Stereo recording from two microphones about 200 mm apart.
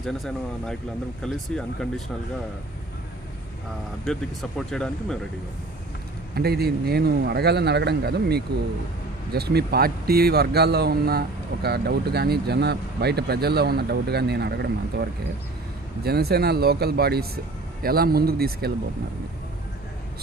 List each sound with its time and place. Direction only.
0.0 s speech: centre (ahead or behind)
4.0 s speech: centre (ahead or behind)
6.3 s speech: 50° right (ahead or behind)
16.0 s speech: 50° right (ahead or behind)